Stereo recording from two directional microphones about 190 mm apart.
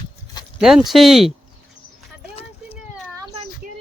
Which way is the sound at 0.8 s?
Centre (ahead or behind).